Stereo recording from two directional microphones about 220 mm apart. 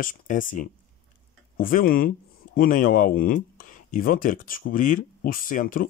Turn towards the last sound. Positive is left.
turn(degrees=40)  # may be behind; listen again after turning